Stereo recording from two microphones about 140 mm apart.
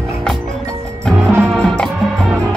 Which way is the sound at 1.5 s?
5° left (ahead or behind).